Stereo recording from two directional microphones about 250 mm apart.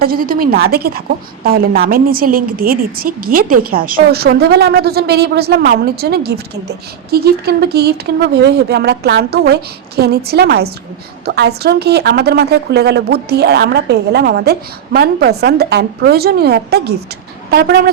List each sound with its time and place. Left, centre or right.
0.0 s a woman's voice: right